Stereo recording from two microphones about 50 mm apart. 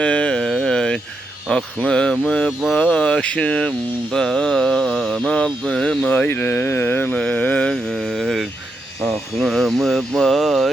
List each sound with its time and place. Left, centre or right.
0.0 s a sound: left
5.3 s speech: centre
5.7 s a sound: centre
6.0 s speech: left
7.2 s speech: left
7.7 s speech: centre